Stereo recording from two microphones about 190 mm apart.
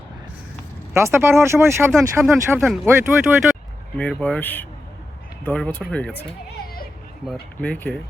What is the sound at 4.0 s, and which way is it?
Speech, 5° left (ahead or behind).